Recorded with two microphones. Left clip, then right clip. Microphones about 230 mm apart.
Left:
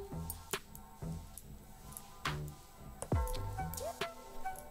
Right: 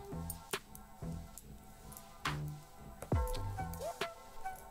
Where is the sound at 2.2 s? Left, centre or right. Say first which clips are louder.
Even; centre.